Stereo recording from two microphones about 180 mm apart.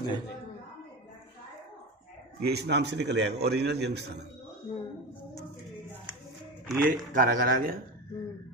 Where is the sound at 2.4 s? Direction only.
70° right (ahead or behind).